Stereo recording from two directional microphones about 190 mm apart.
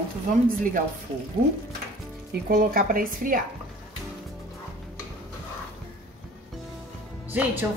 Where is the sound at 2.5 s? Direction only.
50° right (ahead or behind).